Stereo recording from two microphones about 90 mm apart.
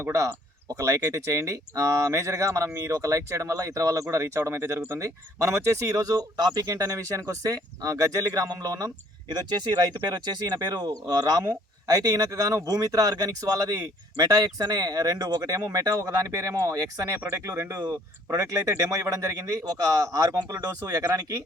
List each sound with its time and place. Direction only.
0.0 s speech: 35° right (ahead or behind)
10.1 s speech: 50° right (ahead or behind)